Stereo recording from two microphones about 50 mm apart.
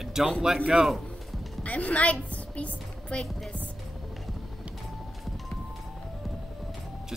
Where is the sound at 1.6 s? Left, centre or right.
Left.